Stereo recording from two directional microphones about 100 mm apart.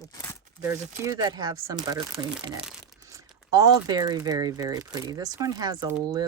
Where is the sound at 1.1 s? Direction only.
40° right (ahead or behind).